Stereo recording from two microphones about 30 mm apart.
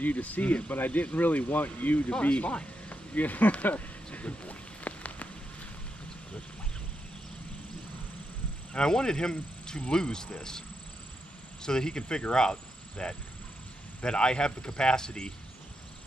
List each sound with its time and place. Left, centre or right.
0.0 s speech: left
0.7 s speech: left
2.0 s speech: left
2.9 s a sound: left
8.7 s speech: left
11.6 s speech: left